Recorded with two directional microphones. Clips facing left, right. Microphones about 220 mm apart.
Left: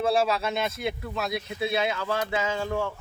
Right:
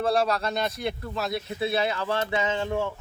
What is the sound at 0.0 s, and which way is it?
Speech, 5° left (ahead or behind).